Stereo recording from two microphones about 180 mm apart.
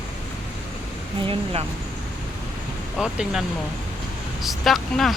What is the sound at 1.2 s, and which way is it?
Speech, 30° right (ahead or behind).